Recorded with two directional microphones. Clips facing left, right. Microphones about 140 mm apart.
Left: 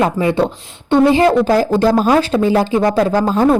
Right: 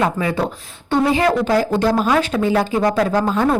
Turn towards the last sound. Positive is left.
turn(degrees=35)  # may be behind; listen again after turning